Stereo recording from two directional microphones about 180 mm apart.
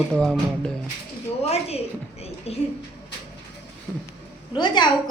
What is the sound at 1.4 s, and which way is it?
A woman's voice, 35° left (ahead or behind).